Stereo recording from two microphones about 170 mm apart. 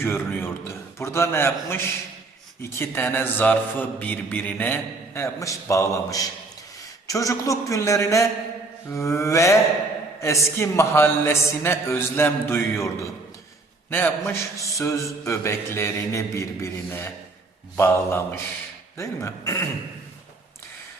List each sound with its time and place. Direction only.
0.0 s a man's voice: 15° left (ahead or behind)
13.9 s a man's voice: 10° left (ahead or behind)